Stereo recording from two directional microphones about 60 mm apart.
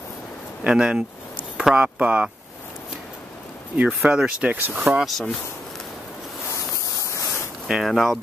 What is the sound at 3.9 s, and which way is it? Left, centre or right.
Speech, centre.